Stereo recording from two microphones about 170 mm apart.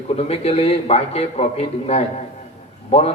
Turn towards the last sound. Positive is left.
turn(degrees=35)  # may be behind; listen again after turning